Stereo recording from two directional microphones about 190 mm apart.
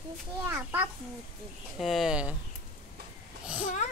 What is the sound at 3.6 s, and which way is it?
Speech, 40° left (ahead or behind).